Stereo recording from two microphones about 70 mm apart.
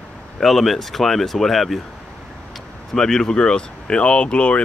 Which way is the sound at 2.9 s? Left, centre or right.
Centre.